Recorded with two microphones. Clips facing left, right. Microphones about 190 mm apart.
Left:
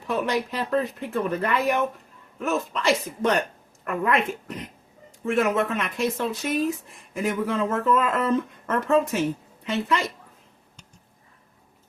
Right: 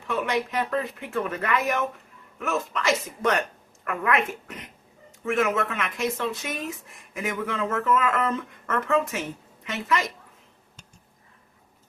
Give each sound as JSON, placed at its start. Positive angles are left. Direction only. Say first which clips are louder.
{"t": 0.1, "sound": "speech", "louder": "left 1 dB", "side_deg": 35}